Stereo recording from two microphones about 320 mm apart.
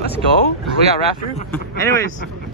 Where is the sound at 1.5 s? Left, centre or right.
Centre.